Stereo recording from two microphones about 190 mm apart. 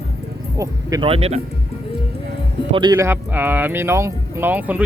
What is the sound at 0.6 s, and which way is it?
Speech, 20° right (ahead or behind).